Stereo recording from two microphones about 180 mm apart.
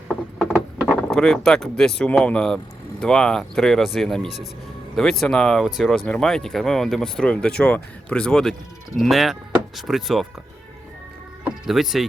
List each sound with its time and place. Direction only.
0.1 s vehicle: 5° right (ahead or behind)
1.1 s speech: 5° left (ahead or behind)
11.4 s speech: centre (ahead or behind)